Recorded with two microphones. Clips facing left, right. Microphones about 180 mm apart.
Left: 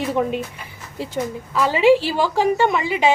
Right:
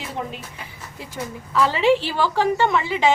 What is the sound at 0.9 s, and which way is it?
Speech, 30° left (ahead or behind).